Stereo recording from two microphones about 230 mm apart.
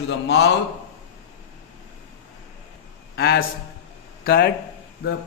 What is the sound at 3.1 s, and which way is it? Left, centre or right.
A man's voice, left.